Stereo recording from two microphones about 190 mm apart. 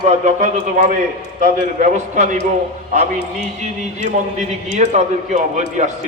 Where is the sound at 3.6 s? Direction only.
40° right (ahead or behind).